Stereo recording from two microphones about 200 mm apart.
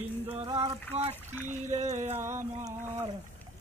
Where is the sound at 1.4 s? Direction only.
35° right (ahead or behind).